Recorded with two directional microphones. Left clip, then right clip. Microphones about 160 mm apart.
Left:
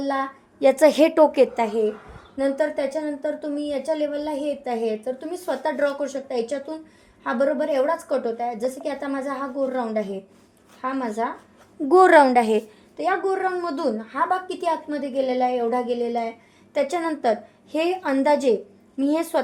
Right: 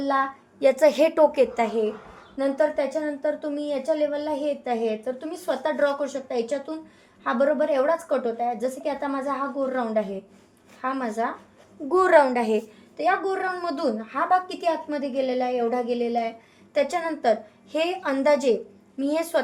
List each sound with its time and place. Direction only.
0.1 s a woman's voice: 30° left (ahead or behind)
11.9 s a woman's voice: 45° left (ahead or behind)
13.0 s a woman's voice: 35° left (ahead or behind)